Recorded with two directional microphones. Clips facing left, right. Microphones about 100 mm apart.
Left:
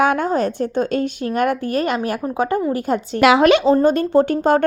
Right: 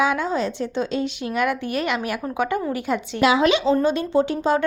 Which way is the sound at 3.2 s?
65° left (ahead or behind).